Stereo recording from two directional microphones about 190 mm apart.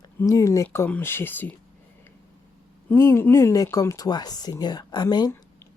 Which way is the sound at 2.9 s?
10° left (ahead or behind).